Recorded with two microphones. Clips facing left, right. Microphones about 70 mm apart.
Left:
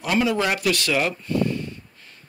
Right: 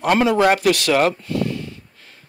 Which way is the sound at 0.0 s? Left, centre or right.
Right.